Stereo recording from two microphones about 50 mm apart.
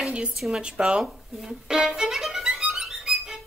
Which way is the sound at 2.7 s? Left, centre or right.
Centre.